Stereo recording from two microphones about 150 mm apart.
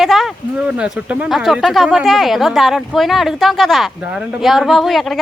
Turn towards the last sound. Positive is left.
turn(degrees=0)  # may be behind; listen again after turning